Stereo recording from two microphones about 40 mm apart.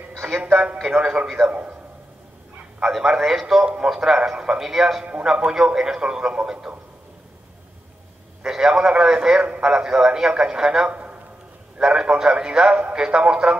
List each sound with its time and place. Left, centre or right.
0.2 s speech: right
1.2 s a man's voice: centre
1.5 s a man's voice: right
2.8 s a man's voice: centre
3.6 s speech: right
3.9 s a man's voice: centre
8.5 s a man's voice: centre
10.9 s a sound: right
11.8 s speech: right